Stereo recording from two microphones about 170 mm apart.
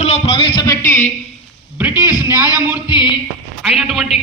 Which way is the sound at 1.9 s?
25° left (ahead or behind).